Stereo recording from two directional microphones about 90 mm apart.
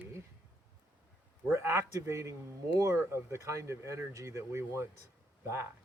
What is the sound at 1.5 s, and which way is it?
Speech, 30° right (ahead or behind).